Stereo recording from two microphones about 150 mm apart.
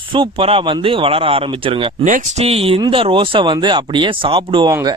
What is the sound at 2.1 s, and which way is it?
Speech, 60° right (ahead or behind).